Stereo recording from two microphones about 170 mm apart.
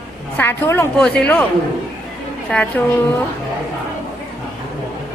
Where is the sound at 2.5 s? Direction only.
10° left (ahead or behind).